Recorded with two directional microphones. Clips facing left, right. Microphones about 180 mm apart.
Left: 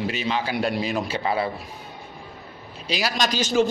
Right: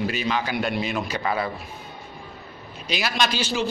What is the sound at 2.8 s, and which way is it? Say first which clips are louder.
Speech: even; 35° left (ahead or behind).